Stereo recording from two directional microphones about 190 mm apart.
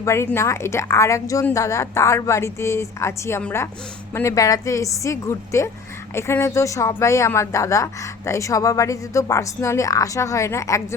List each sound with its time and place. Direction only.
0.0 s a woman's voice: 15° left (ahead or behind)